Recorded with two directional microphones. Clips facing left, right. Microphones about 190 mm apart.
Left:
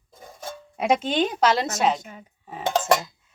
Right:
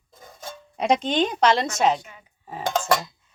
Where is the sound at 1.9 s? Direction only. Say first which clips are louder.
Left 1 dB; 45° left (ahead or behind).